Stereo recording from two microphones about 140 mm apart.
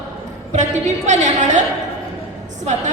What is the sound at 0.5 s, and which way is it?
A woman's voice, 60° right (ahead or behind).